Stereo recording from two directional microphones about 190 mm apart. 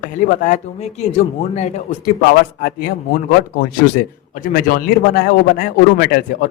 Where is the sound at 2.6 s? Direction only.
55° left (ahead or behind).